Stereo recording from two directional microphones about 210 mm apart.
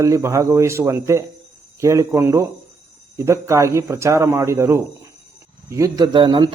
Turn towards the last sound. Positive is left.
turn(degrees=-20)  # may be behind; listen again after turning